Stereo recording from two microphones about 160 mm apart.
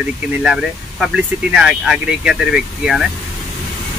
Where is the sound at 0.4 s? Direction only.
Centre (ahead or behind).